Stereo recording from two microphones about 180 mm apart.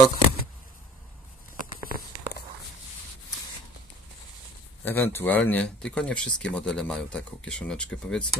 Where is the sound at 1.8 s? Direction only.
55° left (ahead or behind).